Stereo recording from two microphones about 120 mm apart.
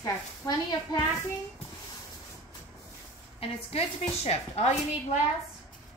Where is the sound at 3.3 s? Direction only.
55° left (ahead or behind).